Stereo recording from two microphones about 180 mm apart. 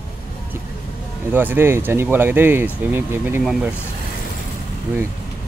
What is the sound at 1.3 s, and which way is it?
Speech, 10° right (ahead or behind).